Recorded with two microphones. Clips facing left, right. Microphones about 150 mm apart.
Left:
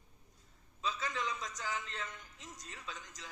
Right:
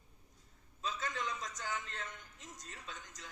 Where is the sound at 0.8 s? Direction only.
50° right (ahead or behind).